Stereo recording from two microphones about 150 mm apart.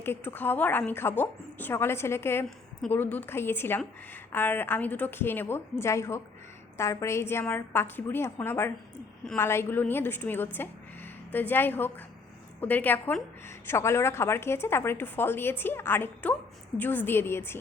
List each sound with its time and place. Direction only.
0.0 s a woman's voice: 15° left (ahead or behind)